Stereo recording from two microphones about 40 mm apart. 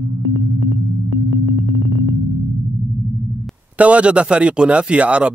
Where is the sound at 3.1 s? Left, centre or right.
Centre.